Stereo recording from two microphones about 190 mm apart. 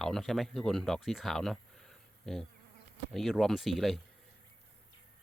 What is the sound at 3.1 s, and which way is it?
Speech, centre (ahead or behind).